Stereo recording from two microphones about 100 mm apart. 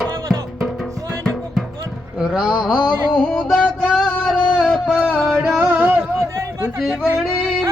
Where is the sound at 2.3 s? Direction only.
5° right (ahead or behind).